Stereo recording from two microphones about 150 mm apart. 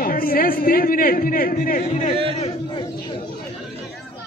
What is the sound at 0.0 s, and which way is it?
A man's voice, 75° left (ahead or behind).